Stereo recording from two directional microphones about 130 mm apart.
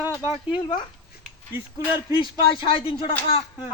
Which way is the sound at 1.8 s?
35° left (ahead or behind).